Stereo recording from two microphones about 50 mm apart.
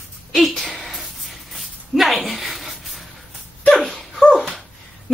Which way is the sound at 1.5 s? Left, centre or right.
Centre.